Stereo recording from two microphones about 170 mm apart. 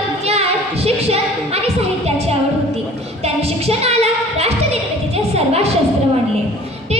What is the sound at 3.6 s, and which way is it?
Singing, 35° right (ahead or behind).